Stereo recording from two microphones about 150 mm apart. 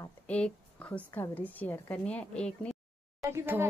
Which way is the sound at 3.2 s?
15° right (ahead or behind).